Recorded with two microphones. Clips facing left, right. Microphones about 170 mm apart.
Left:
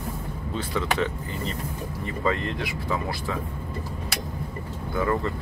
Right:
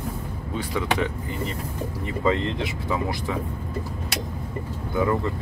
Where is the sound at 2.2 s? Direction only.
20° right (ahead or behind).